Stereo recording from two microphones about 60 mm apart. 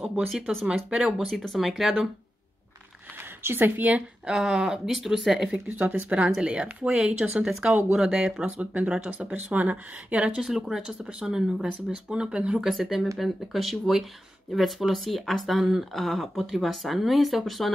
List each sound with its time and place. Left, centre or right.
0.1 s speech: centre
0.8 s speech: centre
1.6 s speech: centre
3.4 s speech: right
4.3 s speech: centre
5.7 s speech: right
6.1 s speech: centre
12.6 s speech: centre